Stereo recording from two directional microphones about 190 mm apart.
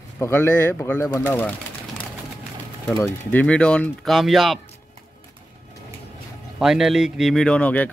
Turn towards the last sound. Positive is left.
turn(degrees=10)  # may be behind; listen again after turning